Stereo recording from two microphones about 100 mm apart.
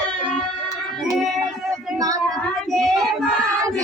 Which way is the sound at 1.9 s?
35° right (ahead or behind).